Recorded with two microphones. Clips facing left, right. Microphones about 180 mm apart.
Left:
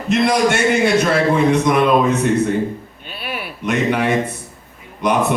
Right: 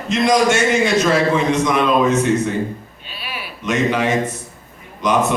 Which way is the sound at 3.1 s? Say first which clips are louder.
Left 4 dB; 55° left (ahead or behind).